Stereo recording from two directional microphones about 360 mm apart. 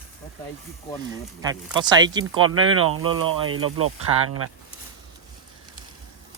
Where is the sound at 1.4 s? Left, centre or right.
Centre.